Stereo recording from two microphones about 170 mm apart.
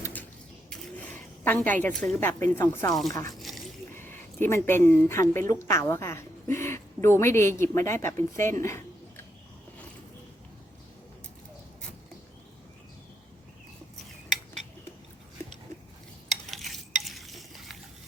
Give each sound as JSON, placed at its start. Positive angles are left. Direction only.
{"t": 0.0, "sound": "printer", "side_deg": 10}
{"t": 0.7, "sound": "zipper", "side_deg": 10}
{"t": 2.1, "sound": "speech", "side_deg": 15}
{"t": 3.3, "sound": "a sound", "side_deg": 0}
{"t": 3.9, "sound": "speech", "side_deg": 10}
{"t": 16.5, "sound": "stir", "side_deg": 0}